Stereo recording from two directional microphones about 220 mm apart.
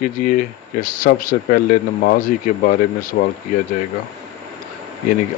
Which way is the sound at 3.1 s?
45° left (ahead or behind).